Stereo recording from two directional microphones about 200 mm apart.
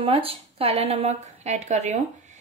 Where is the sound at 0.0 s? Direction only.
30° right (ahead or behind).